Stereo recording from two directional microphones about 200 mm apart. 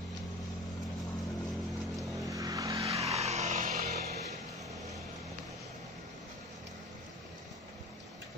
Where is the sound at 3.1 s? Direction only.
35° right (ahead or behind).